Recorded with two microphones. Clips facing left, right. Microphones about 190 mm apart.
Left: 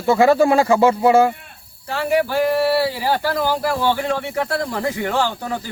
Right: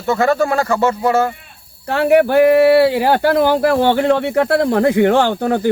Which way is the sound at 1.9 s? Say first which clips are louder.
Right 7 dB; 60° right (ahead or behind).